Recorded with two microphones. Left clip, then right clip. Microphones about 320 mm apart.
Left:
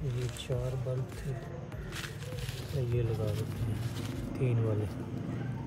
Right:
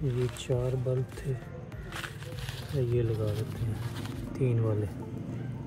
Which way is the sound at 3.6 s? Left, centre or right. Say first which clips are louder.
Right 1 dB; centre.